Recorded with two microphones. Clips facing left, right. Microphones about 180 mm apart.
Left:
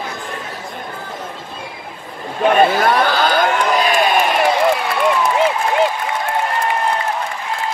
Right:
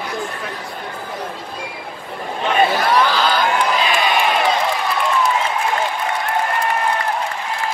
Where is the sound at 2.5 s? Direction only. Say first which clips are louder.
Left 3 dB; 50° left (ahead or behind).